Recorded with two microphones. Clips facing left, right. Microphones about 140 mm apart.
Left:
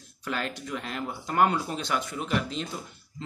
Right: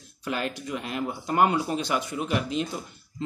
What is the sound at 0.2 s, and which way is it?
Speech, 15° right (ahead or behind).